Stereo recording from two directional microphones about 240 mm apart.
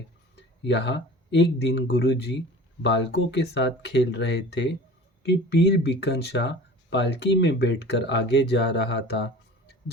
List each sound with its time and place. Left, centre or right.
0.6 s speech: left